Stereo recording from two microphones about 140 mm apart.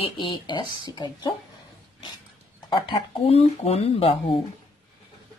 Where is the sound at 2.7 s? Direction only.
40° left (ahead or behind).